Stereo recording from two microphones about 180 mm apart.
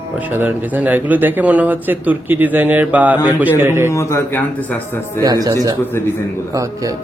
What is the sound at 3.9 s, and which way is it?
Speech, 15° left (ahead or behind).